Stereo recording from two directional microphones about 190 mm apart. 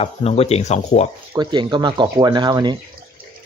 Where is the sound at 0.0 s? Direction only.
30° left (ahead or behind).